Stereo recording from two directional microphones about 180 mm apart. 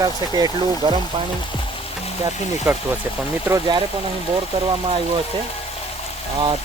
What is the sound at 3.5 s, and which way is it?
Speech, 20° right (ahead or behind).